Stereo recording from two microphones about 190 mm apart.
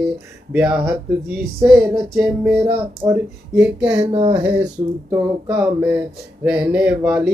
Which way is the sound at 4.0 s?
25° right (ahead or behind).